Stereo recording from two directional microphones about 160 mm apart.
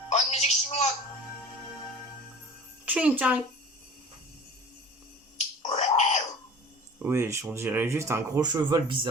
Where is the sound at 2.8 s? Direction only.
10° right (ahead or behind).